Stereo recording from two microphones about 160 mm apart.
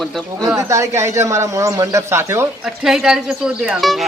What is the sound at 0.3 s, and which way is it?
Speech, 20° right (ahead or behind).